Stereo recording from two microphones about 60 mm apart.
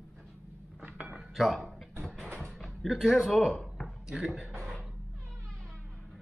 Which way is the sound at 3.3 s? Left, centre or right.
Centre.